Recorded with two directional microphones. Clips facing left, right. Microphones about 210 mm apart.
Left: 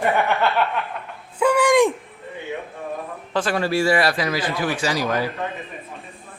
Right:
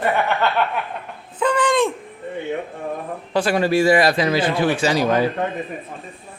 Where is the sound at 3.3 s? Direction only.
15° right (ahead or behind).